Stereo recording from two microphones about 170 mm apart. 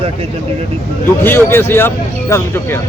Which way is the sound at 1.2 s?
10° left (ahead or behind).